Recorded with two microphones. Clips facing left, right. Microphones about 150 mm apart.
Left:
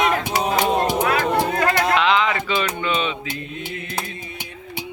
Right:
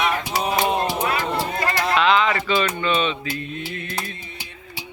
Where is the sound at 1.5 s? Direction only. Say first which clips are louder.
Left 4 dB; 65° left (ahead or behind).